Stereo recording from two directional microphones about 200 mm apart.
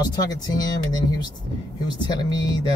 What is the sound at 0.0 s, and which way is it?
Speech, 20° left (ahead or behind).